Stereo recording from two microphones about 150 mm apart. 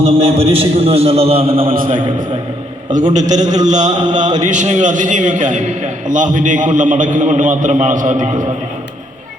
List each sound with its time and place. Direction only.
0.0 s a man's voice: 40° right (ahead or behind)
1.7 s a man's voice: 70° right (ahead or behind)
2.9 s a man's voice: 55° right (ahead or behind)